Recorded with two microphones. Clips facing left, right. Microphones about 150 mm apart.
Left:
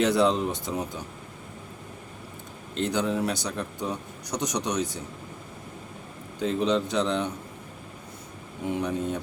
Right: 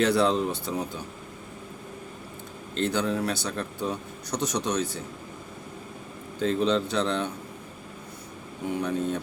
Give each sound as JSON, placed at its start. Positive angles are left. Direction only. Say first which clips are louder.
{"t": 0.0, "sound": "speech", "louder": "even", "side_deg": 20}
{"t": 2.7, "sound": "speech", "louder": "even", "side_deg": 15}
{"t": 6.4, "sound": "speech", "louder": "right 1 dB", "side_deg": 15}
{"t": 8.8, "sound": "speech", "louder": "right 2 dB", "side_deg": 15}